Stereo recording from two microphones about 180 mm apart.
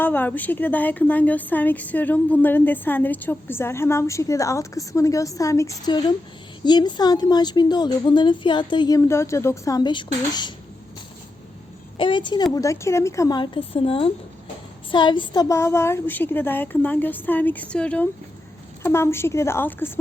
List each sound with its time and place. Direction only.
0.0 s a woman's voice: 10° left (ahead or behind)
11.9 s a woman's voice: 25° left (ahead or behind)